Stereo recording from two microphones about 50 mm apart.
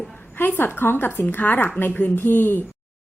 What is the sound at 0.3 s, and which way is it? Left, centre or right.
A woman's voice, left.